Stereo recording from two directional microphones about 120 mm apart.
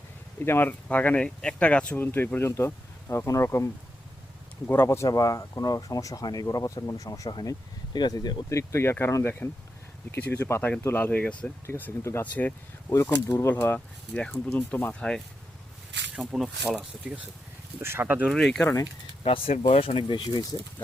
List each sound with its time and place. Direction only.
0.3 s speech: 20° left (ahead or behind); by 8.4 s 35° left (ahead or behind)
8.4 s speech: 25° left (ahead or behind)
11.6 s speech: 20° left (ahead or behind)
12.9 s speech: 25° left (ahead or behind)
16.1 s speech: 5° right (ahead or behind)
17.7 s speech: 20° right (ahead or behind)
18.3 s speech: centre (ahead or behind)
19.2 s speech: 50° left (ahead or behind)